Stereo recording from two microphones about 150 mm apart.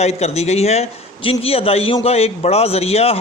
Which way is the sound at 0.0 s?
45° left (ahead or behind).